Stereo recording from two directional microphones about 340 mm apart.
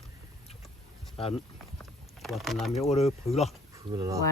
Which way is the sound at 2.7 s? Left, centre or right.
Centre.